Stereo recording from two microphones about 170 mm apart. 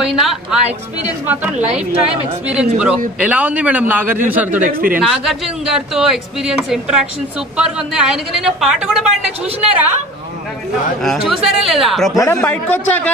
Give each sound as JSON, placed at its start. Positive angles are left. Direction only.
{"t": 0.0, "sound": "a man's voice", "side_deg": 0}
{"t": 4.6, "sound": "speech", "side_deg": -55}
{"t": 5.0, "sound": "speech", "side_deg": 0}
{"t": 11.0, "sound": "speech", "side_deg": 0}